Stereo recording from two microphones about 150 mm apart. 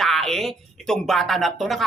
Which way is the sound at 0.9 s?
Centre (ahead or behind).